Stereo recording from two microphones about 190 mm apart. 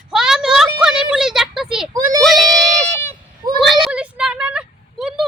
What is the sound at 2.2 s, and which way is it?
Speech, centre (ahead or behind).